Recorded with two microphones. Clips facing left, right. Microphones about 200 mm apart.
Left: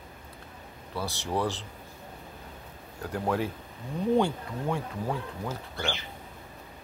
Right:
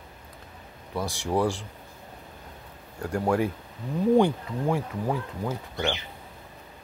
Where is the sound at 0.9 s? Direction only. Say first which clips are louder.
Right 4 dB; 15° right (ahead or behind).